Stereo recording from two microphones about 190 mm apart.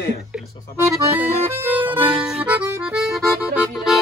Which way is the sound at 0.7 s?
10° right (ahead or behind).